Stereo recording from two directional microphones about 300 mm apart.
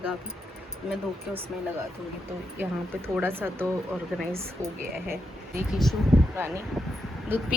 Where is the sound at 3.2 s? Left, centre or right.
Centre.